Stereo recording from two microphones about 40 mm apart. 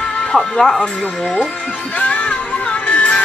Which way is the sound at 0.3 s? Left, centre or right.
Centre.